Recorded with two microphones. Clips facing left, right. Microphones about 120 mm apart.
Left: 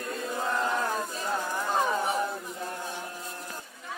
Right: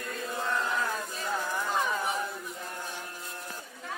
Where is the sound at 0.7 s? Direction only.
35° left (ahead or behind).